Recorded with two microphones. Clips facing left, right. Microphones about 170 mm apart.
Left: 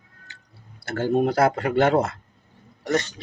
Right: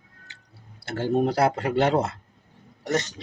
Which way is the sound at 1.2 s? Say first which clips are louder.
Left 2 dB; 30° right (ahead or behind).